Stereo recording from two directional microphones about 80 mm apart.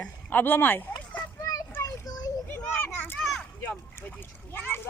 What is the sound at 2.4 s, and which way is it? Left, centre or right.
Children playing, left.